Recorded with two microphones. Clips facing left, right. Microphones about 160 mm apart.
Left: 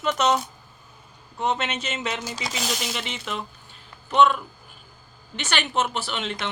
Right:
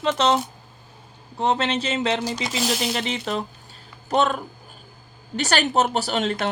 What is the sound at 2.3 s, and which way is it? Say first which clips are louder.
Speech: right 5 dB; centre (ahead or behind).